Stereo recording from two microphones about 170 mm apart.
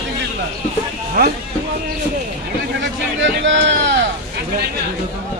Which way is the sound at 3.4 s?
90° right.